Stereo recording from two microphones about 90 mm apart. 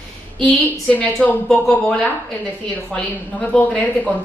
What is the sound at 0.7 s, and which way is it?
Speech, 15° left (ahead or behind).